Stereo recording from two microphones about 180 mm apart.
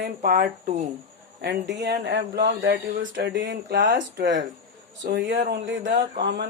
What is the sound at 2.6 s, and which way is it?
Speech, 90° right.